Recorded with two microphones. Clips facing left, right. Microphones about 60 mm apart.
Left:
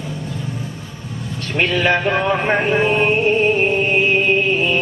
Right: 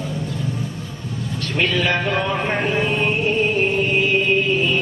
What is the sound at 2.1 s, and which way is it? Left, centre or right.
Speech, left.